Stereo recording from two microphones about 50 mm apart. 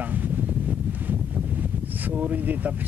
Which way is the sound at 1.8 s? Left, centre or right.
Right.